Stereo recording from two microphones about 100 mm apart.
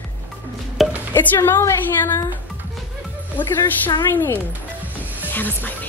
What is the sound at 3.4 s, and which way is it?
Speech, 20° left (ahead or behind).